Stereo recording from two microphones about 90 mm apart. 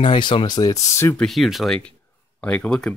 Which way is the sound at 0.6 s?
45° left (ahead or behind).